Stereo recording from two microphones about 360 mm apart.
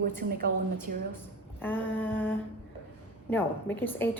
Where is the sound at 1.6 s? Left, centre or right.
Centre.